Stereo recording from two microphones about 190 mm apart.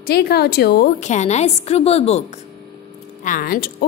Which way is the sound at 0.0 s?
55° left (ahead or behind).